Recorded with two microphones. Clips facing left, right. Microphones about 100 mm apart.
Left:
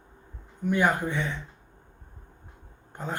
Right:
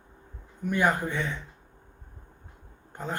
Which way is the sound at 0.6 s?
15° left (ahead or behind).